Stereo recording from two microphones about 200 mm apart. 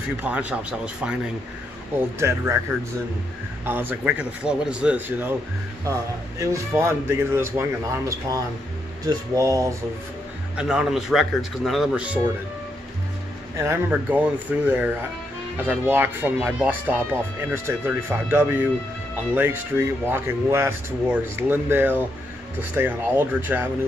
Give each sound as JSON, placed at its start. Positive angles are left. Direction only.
{"t": 0.2, "sound": "speech", "side_deg": -5}
{"t": 3.6, "sound": "speech", "side_deg": -10}
{"t": 6.4, "sound": "speech", "side_deg": -15}
{"t": 10.5, "sound": "speech", "side_deg": -5}
{"t": 13.6, "sound": "speech", "side_deg": -10}